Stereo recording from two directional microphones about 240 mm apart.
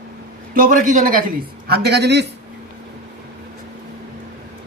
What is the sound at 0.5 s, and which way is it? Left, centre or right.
A man's voice, right.